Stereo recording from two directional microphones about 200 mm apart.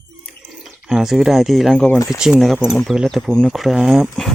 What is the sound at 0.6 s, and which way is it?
Speech, centre (ahead or behind).